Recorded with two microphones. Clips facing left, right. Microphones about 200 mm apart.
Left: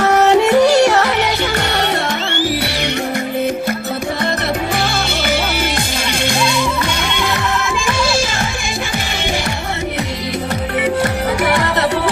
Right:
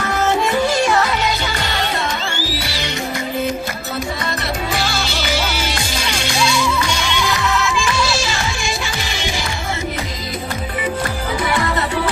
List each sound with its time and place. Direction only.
0.0 s music: 70° left (ahead or behind)
4.8 s music: 55° left (ahead or behind)